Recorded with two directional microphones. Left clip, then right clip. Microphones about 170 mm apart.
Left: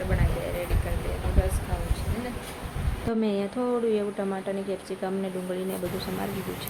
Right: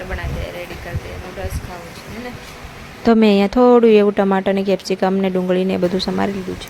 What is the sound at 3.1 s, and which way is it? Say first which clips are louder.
A woman's voice: right 14 dB; 60° right (ahead or behind).